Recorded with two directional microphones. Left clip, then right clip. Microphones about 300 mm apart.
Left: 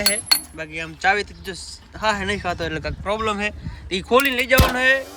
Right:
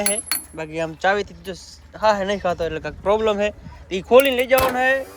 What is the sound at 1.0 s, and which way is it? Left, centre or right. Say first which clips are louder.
Speech: left 2 dB; centre.